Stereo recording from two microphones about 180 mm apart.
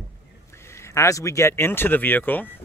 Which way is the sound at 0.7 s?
15° left (ahead or behind).